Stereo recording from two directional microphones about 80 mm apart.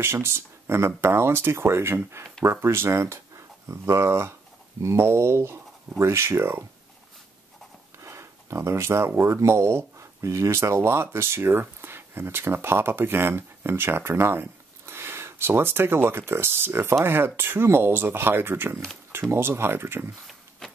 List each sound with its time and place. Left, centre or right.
0.0 s speech: right
8.0 s speech: right
20.2 s a sound: centre